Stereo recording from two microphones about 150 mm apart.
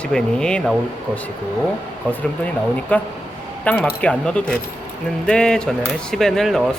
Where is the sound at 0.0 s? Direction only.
5° left (ahead or behind).